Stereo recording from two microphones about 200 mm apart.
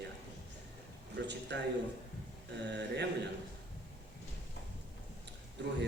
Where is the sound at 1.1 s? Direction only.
60° right (ahead or behind).